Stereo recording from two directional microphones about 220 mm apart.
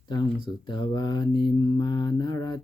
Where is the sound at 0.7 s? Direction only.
20° left (ahead or behind).